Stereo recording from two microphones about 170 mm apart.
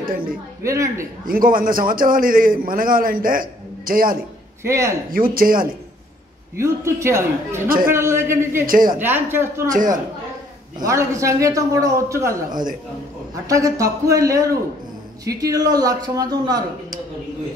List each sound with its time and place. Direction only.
0.0 s a man's voice: 55° right (ahead or behind)
0.7 s a man's voice: 15° right (ahead or behind)
1.2 s a man's voice: 55° right (ahead or behind)
4.6 s a man's voice: 15° right (ahead or behind)
5.1 s a man's voice: 60° right (ahead or behind)
6.6 s a man's voice: 15° right (ahead or behind)
7.6 s a man's voice: 60° right (ahead or behind)
7.9 s a man's voice: 15° right (ahead or behind)
8.6 s a man's voice: 55° right (ahead or behind)
8.9 s a man's voice: 10° right (ahead or behind)
9.7 s a man's voice: 55° right (ahead or behind)
10.9 s a man's voice: 20° right (ahead or behind)
13.5 s a man's voice: 20° right (ahead or behind)